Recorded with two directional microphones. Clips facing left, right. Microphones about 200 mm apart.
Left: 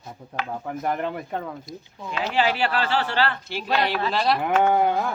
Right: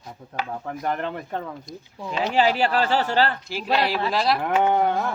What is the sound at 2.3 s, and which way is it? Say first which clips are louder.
Speech: right 2 dB; 40° right (ahead or behind).